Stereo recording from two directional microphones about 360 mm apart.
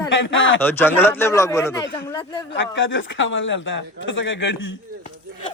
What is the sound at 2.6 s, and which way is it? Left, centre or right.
Speech, left.